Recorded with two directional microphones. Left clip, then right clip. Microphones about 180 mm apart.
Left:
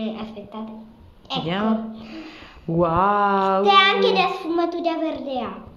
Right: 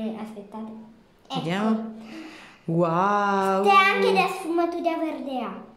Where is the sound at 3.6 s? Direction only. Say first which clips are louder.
Left 2 dB; 30° right (ahead or behind).